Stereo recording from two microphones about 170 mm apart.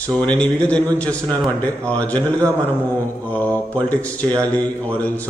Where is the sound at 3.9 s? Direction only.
10° left (ahead or behind).